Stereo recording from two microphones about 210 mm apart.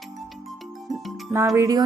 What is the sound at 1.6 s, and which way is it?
Speech, 15° right (ahead or behind).